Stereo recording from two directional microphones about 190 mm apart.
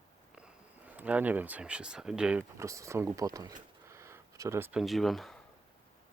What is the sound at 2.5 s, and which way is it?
Speech, 15° right (ahead or behind).